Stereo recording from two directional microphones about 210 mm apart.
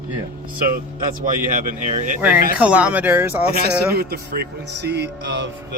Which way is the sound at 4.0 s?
50° right (ahead or behind).